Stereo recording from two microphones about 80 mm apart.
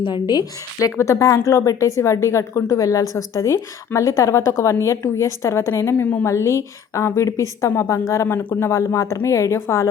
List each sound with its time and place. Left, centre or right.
0.0 s a woman's voice: left
0.8 s a woman's voice: left
6.2 s a woman's voice: left